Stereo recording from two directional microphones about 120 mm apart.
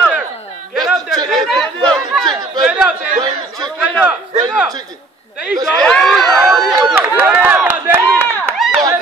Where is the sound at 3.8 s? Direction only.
10° right (ahead or behind).